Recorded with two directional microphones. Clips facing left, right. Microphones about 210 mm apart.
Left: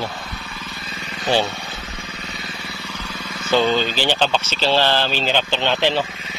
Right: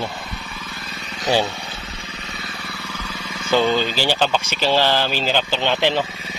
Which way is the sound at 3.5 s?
10° right (ahead or behind).